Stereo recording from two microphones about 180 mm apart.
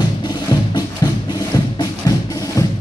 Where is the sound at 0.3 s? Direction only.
25° left (ahead or behind).